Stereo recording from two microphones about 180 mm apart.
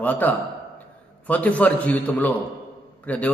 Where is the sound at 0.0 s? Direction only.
10° left (ahead or behind).